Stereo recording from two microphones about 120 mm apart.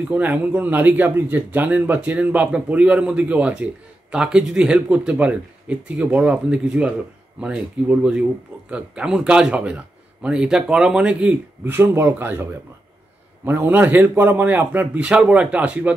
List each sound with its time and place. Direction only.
0.1 s a man's voice: 15° right (ahead or behind)
13.5 s a man's voice: 15° right (ahead or behind)